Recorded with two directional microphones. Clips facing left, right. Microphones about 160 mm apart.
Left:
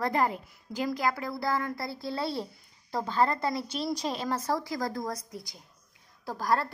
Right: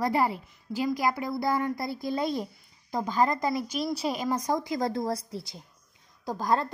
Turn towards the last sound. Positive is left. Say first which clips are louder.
# right 2 dB
turn(degrees=-20)  # may be behind; listen again after turning